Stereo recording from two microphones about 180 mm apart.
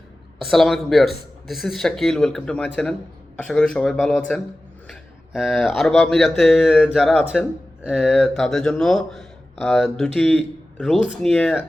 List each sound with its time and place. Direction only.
0.4 s speech: centre (ahead or behind)